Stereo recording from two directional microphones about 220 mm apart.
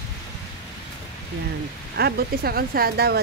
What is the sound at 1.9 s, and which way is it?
Speech, 45° right (ahead or behind).